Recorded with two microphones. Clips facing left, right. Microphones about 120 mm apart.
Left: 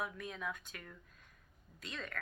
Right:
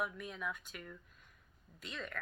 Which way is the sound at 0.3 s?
30° left (ahead or behind).